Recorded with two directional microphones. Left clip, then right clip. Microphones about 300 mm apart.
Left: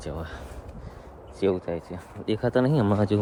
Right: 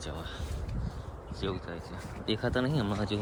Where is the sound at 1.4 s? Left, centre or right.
Centre.